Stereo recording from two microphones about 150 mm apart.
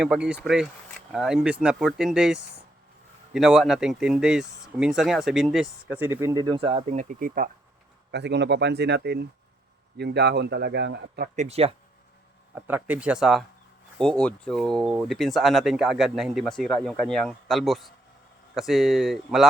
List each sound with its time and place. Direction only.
0.0 s speech: 5° right (ahead or behind); by 6.8 s 35° right (ahead or behind)
6.8 s speech: 55° right (ahead or behind)
8.7 s a man's voice: 90° right
11.3 s speech: 45° right (ahead or behind)
12.5 s speech: 10° right (ahead or behind)